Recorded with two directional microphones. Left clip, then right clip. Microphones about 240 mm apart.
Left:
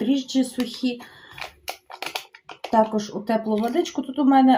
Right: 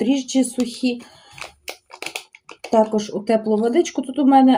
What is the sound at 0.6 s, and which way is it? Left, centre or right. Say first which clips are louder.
Speech: right 4 dB; centre.